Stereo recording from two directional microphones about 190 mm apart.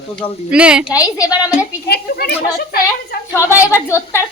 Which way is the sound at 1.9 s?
60° left (ahead or behind).